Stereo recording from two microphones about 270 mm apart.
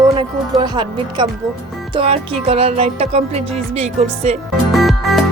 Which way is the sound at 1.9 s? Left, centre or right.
Right.